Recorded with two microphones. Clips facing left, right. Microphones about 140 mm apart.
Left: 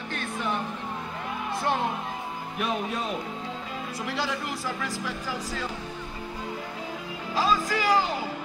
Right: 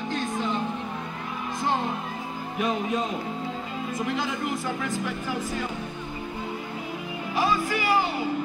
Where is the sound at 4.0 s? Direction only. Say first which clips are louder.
Right 2 dB; 20° right (ahead or behind).